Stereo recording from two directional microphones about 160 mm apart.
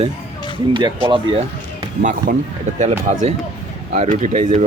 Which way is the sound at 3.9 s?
45° right (ahead or behind).